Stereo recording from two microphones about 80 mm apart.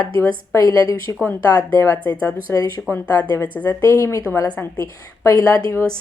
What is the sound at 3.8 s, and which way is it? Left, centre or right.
A woman's voice, left.